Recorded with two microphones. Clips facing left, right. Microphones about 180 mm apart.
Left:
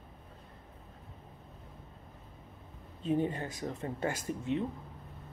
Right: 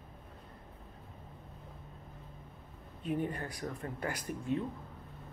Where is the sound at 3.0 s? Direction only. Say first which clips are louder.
Left 4 dB; 25° left (ahead or behind).